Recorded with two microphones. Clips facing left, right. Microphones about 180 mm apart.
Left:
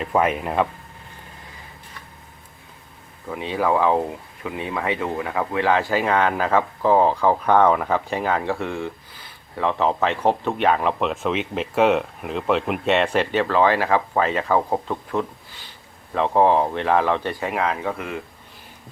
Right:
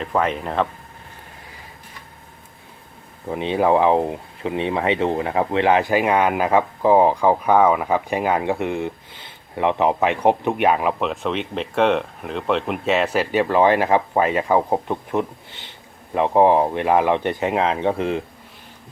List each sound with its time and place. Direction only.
0.0 s speech: 10° left (ahead or behind)
3.2 s speech: 25° right (ahead or behind)